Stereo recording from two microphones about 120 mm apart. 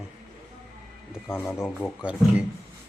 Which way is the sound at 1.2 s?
20° left (ahead or behind).